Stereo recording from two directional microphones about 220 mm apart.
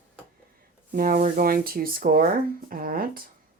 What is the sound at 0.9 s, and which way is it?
Speech, 40° right (ahead or behind).